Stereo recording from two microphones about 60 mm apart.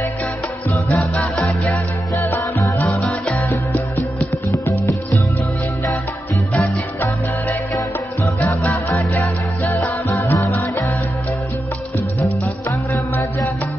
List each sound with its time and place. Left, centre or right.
1.1 s music: centre
8.2 s music: left
8.6 s music: left
10.4 s music: left
12.2 s music: left